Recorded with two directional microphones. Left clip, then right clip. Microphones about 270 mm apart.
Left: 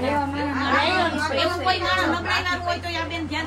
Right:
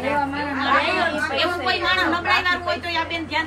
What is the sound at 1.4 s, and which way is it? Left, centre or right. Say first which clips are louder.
A woman's voice: left 1 dB; centre.